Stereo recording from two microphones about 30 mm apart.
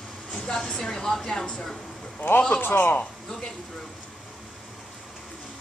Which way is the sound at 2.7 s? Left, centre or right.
Left.